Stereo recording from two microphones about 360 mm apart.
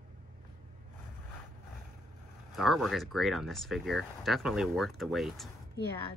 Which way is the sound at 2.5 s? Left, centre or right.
Centre.